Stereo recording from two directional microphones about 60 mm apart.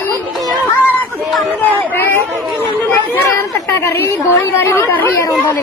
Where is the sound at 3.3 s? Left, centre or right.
Left.